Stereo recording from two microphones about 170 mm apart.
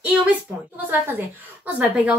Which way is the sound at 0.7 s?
10° right (ahead or behind).